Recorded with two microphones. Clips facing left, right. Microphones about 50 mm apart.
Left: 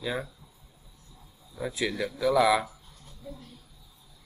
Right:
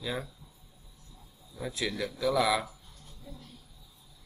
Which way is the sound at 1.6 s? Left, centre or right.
Centre.